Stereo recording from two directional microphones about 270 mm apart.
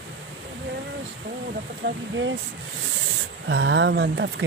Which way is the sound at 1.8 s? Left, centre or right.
Right.